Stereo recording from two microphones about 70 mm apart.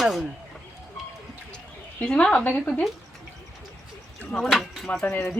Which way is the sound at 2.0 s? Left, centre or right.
Centre.